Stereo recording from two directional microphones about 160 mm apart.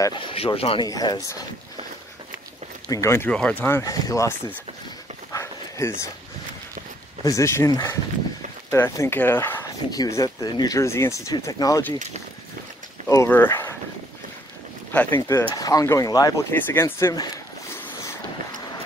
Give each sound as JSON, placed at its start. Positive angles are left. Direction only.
{"t": 0.0, "sound": "speech", "side_deg": 30}
{"t": 2.9, "sound": "speech", "side_deg": 15}
{"t": 5.3, "sound": "dog", "side_deg": 15}
{"t": 7.2, "sound": "speech", "side_deg": 20}
{"t": 13.1, "sound": "speech", "side_deg": 15}
{"t": 14.9, "sound": "speech", "side_deg": 10}